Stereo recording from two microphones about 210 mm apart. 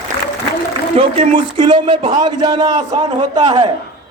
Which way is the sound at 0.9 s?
30° right (ahead or behind).